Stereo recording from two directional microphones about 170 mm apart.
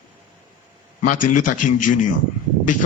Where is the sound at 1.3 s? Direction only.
50° left (ahead or behind).